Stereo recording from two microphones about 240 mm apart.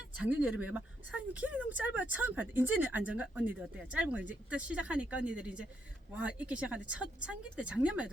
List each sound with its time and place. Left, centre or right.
0.2 s speech: centre